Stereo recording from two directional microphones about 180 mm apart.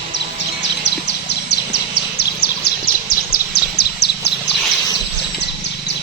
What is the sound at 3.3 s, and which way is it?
Bird, 60° left (ahead or behind).